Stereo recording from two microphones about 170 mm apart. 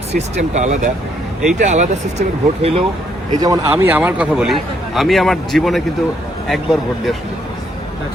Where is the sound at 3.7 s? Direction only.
10° right (ahead or behind).